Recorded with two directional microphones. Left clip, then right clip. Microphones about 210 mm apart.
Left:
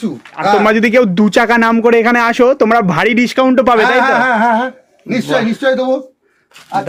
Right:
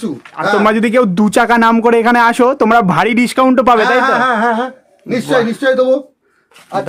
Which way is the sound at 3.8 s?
20° right (ahead or behind).